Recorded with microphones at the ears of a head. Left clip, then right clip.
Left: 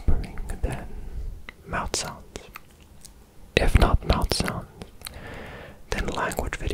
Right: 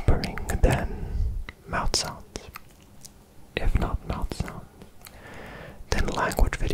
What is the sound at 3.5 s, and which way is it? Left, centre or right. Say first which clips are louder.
Whispering: left 9 dB; left.